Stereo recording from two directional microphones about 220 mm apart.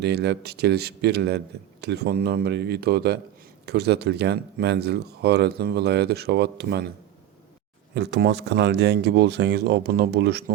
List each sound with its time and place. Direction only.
0.0 s speech: 50° right (ahead or behind)
7.9 s speech: 50° right (ahead or behind)